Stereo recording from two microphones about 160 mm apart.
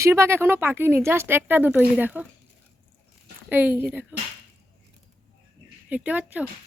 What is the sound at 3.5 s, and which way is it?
Speech, 10° right (ahead or behind).